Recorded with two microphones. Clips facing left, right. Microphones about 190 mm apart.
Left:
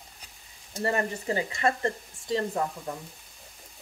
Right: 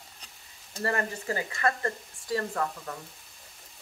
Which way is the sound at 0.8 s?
20° left (ahead or behind).